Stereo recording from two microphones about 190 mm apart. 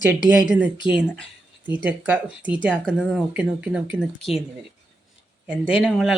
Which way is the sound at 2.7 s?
5° left (ahead or behind).